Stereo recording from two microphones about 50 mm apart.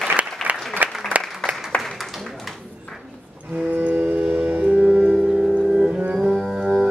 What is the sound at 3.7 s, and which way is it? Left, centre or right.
Music, right.